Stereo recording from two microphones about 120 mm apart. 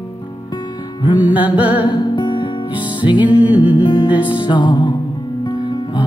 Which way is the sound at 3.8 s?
40° left (ahead or behind).